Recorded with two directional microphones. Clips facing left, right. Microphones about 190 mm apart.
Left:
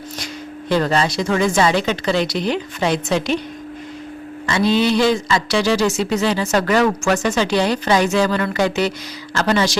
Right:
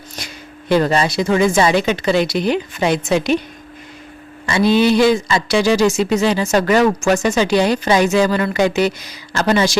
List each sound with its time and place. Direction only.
0.7 s speech: 15° right (ahead or behind)
4.4 s speech: 10° right (ahead or behind)